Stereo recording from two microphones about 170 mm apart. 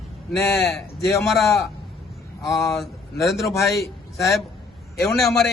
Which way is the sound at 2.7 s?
Centre (ahead or behind).